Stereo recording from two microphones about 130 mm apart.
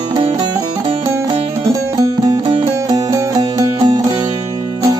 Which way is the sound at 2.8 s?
25° right (ahead or behind).